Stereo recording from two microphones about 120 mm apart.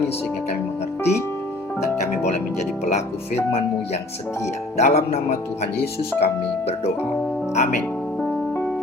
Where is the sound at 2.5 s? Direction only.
70° left (ahead or behind).